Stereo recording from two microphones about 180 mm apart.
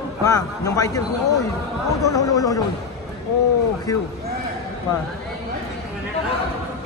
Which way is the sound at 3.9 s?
20° left (ahead or behind).